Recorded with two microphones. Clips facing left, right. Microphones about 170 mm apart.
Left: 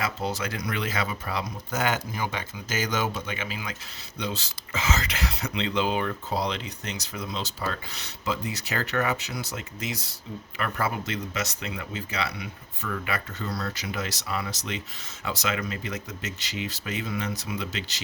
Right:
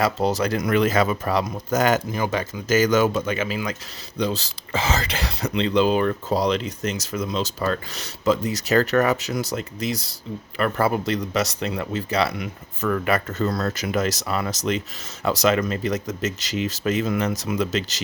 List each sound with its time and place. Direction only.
0.3 s speech: 40° right (ahead or behind)
4.2 s speech: 35° right (ahead or behind); by 14.5 s 55° right (ahead or behind)
15.2 s speech: 40° right (ahead or behind)